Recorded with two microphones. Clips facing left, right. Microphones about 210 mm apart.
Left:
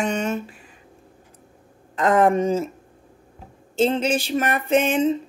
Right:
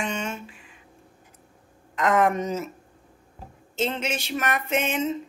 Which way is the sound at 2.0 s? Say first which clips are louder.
Left 4 dB; 30° left (ahead or behind).